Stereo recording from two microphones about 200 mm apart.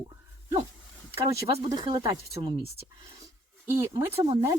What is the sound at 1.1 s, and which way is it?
A woman's voice, 15° right (ahead or behind).